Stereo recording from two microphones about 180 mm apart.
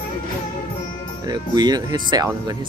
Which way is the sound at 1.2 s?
20° right (ahead or behind).